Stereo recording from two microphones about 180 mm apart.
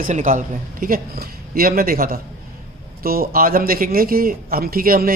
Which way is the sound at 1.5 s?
55° right (ahead or behind).